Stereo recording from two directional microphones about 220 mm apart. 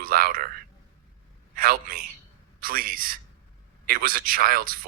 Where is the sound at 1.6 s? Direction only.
40° right (ahead or behind).